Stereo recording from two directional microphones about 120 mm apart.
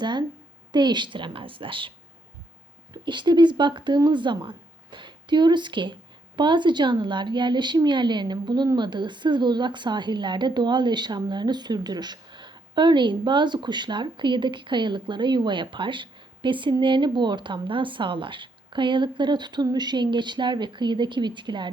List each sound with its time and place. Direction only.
0.0 s a woman's voice: 40° right (ahead or behind)
2.9 s speech: 40° right (ahead or behind)